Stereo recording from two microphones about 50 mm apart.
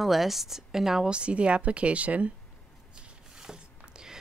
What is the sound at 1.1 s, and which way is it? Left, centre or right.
Speech, right.